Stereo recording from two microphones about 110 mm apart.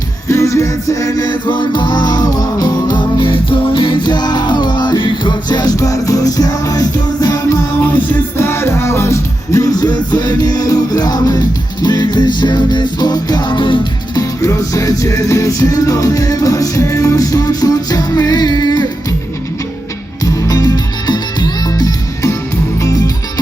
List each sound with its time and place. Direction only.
0.3 s music: 30° left (ahead or behind)
7.9 s music: 20° left (ahead or behind); by 13.8 s 45° left (ahead or behind)
14.2 s music: 30° left (ahead or behind)
20.2 s music: 30° left (ahead or behind)